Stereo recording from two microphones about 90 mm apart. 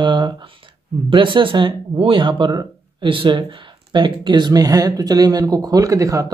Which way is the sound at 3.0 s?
70° right (ahead or behind).